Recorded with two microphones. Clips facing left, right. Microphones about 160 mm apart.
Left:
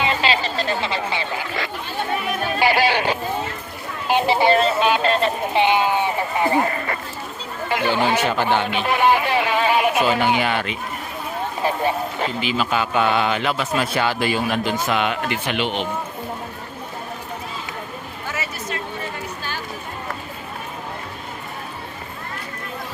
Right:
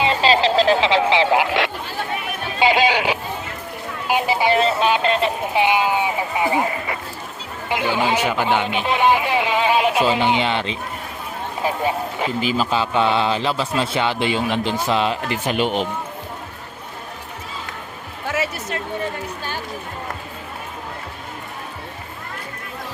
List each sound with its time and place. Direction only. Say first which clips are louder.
0.0 s a sound: right 4 dB; 30° right (ahead or behind)
0.4 s speech: right 8 dB; 90° right
2.6 s a sound: right 2 dB; 20° right (ahead or behind)
4.1 s vehicle: left 2 dB; 10° right (ahead or behind)
5.5 s speech: even; 10° right (ahead or behind); by 10.8 s 25° right (ahead or behind)
11.6 s speech: even; 15° right (ahead or behind)
12.4 s speech: right 3 dB; 40° right (ahead or behind)
12.7 s a man's voice: even; 30° right (ahead or behind)